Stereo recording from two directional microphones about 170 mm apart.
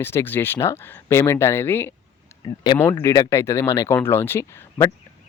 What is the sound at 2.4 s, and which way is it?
Speech, 25° left (ahead or behind).